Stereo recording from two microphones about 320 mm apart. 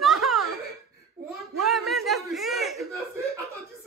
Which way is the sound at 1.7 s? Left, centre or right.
Centre.